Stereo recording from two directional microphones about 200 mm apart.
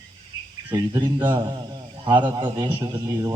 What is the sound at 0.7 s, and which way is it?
Speech, 15° right (ahead or behind).